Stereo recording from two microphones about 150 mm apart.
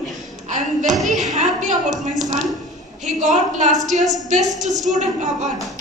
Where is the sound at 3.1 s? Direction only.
55° right (ahead or behind).